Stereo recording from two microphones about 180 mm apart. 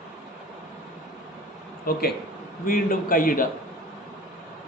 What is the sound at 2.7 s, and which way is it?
Speech, 50° left (ahead or behind).